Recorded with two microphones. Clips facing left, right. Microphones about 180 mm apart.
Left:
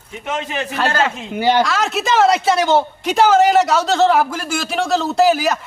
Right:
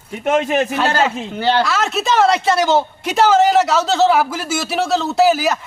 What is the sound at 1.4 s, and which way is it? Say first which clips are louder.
Speech: left 2 dB; 15° left (ahead or behind).